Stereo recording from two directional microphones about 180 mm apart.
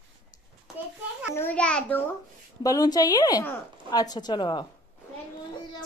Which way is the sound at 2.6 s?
20° left (ahead or behind).